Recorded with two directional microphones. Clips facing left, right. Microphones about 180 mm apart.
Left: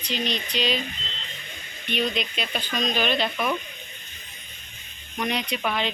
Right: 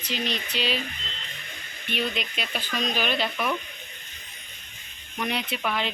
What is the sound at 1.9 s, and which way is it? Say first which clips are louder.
Speech: left 3 dB; 5° right (ahead or behind).